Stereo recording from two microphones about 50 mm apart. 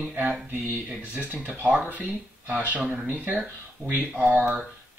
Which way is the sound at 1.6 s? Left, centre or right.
Right.